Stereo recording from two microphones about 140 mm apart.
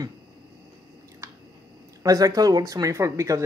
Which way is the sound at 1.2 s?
20° right (ahead or behind).